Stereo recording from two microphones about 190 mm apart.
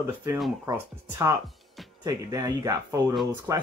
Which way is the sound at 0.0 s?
15° right (ahead or behind).